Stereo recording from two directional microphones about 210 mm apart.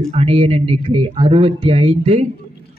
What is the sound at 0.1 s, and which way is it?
A man's voice, 25° right (ahead or behind).